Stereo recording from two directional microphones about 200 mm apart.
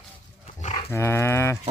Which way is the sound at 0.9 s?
10° left (ahead or behind).